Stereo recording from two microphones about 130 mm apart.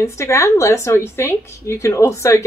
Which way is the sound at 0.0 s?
20° left (ahead or behind).